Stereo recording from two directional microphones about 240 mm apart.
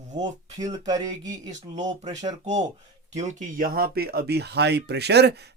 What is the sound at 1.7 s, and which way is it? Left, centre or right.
Speech, right.